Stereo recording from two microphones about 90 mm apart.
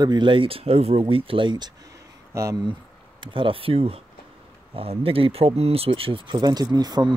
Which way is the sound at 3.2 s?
70° right (ahead or behind).